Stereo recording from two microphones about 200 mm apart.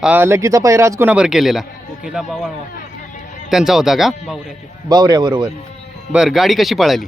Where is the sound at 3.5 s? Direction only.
Centre (ahead or behind).